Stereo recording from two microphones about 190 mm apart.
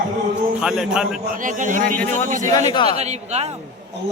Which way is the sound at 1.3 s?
45° right (ahead or behind).